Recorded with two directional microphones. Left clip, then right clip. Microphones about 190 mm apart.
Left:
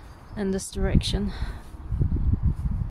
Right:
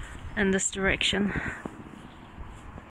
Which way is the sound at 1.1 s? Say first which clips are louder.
Right 5 dB; 20° left (ahead or behind).